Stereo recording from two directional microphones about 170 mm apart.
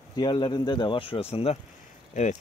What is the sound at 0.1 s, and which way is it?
Speech, 25° left (ahead or behind).